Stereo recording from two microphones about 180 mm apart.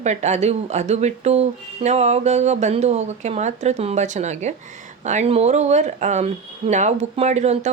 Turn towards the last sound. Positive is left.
turn(degrees=-35)  # may be behind; listen again after turning